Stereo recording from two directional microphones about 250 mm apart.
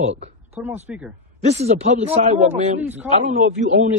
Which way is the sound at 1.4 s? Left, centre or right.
Right.